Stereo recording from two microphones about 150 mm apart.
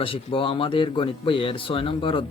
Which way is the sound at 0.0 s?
35° left (ahead or behind).